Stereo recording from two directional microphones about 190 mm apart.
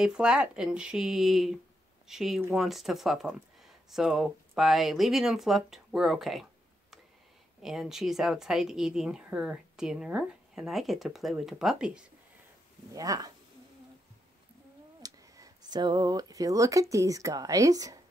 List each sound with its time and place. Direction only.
0.0 s speech: 5° right (ahead or behind)
7.6 s speech: centre (ahead or behind)
12.9 s speech: 20° right (ahead or behind)
15.0 s speech: 20° right (ahead or behind)